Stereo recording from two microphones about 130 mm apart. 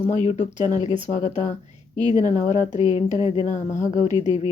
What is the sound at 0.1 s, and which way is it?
A woman's voice, 65° left (ahead or behind).